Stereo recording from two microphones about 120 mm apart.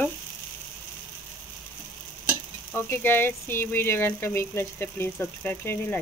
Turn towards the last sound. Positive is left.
turn(degrees=15)  # may be behind; listen again after turning